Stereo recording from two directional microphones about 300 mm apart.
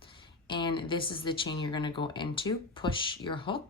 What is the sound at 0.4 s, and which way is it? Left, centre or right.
Speech, centre.